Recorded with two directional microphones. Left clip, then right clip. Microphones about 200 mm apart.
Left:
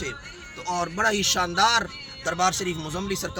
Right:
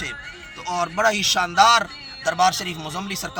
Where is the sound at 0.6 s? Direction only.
15° left (ahead or behind).